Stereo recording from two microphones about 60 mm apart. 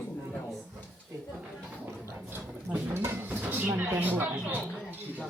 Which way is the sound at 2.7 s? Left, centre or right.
Right.